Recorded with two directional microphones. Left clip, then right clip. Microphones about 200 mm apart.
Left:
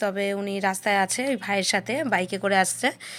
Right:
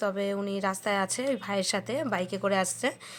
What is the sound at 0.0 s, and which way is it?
A woman's voice, 10° left (ahead or behind).